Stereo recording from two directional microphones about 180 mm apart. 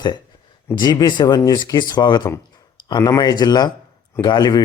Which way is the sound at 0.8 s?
20° left (ahead or behind).